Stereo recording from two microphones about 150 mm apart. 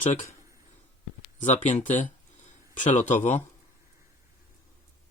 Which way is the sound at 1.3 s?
55° left (ahead or behind).